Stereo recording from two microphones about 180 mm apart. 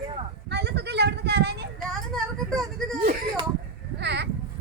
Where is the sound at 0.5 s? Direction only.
70° right (ahead or behind).